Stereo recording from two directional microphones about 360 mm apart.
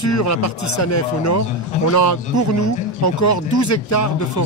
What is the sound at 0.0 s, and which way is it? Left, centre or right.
Speech, left.